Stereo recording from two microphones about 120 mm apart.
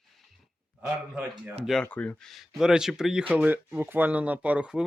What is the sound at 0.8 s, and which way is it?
Speech, 15° right (ahead or behind).